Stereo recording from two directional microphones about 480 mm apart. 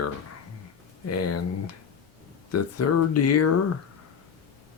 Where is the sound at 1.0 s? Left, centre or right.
Left.